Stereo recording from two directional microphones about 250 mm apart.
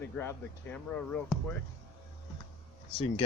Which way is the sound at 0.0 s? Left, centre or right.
Centre.